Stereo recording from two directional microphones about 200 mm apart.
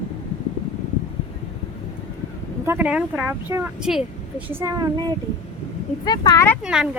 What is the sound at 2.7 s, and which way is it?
Speech, 10° right (ahead or behind).